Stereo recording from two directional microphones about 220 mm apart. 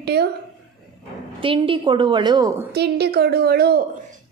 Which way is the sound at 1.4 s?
25° right (ahead or behind).